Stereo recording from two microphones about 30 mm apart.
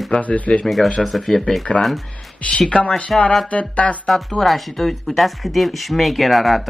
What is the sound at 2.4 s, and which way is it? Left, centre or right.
Speech, left.